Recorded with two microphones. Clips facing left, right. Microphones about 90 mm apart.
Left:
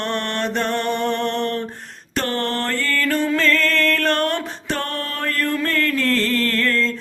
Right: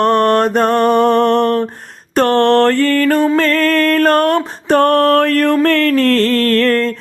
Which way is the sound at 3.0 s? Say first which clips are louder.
Right 7 dB; 45° right (ahead or behind).